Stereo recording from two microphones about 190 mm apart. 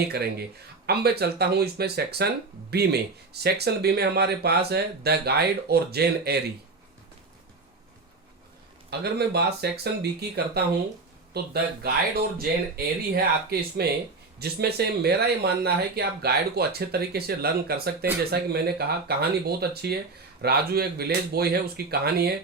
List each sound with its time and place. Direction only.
0.1 s speech: 55° right (ahead or behind)
8.9 s speech: 60° right (ahead or behind)